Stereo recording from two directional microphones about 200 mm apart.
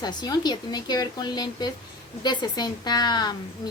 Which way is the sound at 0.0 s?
20° left (ahead or behind).